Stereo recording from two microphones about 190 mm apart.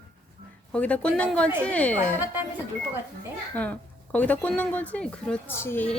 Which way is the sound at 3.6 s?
5° left (ahead or behind).